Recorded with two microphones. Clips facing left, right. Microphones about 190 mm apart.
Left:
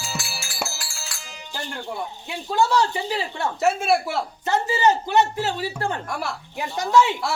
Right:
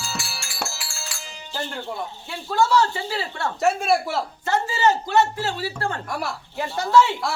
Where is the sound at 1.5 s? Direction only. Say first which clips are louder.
Right 1 dB; 15° left (ahead or behind).